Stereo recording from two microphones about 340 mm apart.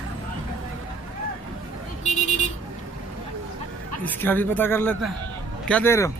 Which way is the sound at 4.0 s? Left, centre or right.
Centre.